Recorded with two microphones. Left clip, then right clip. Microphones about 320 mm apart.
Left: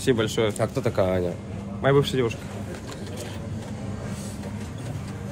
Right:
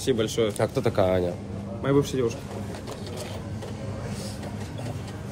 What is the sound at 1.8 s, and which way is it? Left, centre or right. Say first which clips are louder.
Speech: left 3 dB; left.